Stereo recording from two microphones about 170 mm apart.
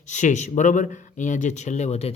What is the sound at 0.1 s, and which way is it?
Speech, 45° left (ahead or behind).